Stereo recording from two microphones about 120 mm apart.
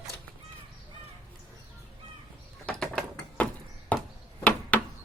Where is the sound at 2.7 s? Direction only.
5° left (ahead or behind).